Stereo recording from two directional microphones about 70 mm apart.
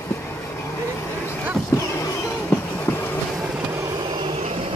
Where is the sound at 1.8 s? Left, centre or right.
Left.